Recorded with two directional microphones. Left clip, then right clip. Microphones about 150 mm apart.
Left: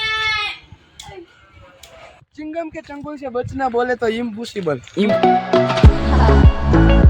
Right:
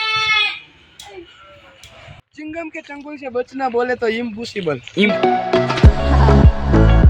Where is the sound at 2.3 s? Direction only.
5° left (ahead or behind).